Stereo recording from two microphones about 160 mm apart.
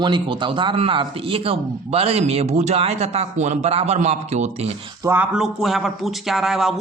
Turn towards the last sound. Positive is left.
turn(degrees=0)  # may be behind; listen again after turning